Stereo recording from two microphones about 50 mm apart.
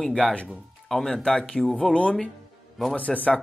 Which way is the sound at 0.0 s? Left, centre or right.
Centre.